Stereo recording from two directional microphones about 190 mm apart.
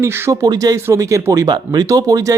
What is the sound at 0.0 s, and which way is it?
Speech, 15° right (ahead or behind).